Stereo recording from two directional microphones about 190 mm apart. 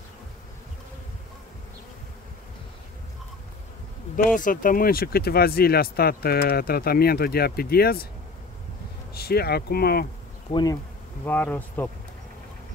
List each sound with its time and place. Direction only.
4.4 s speech: 45° left (ahead or behind)
9.1 s speech: 55° left (ahead or behind)
10.5 s bee: 20° left (ahead or behind)
11.2 s speech: 10° left (ahead or behind)